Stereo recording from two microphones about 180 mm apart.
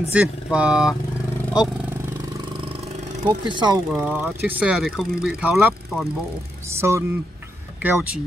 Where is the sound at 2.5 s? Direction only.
30° right (ahead or behind).